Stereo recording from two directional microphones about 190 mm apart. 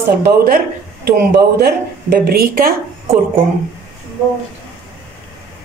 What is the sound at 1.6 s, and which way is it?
Speech, 55° right (ahead or behind).